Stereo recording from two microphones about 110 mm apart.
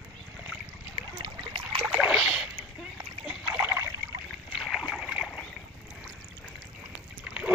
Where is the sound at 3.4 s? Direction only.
20° right (ahead or behind).